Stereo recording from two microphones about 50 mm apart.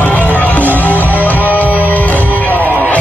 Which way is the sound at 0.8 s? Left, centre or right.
Left.